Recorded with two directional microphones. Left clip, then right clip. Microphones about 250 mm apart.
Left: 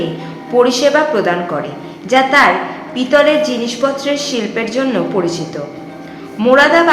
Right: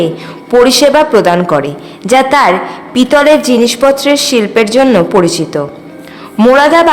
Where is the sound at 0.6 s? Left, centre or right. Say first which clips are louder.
Right 4 dB; right.